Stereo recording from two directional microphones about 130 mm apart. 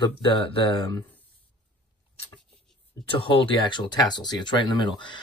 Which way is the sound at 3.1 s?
45° left (ahead or behind).